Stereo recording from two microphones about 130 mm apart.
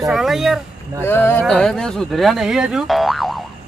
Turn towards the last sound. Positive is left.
turn(degrees=0)  # may be behind; listen again after turning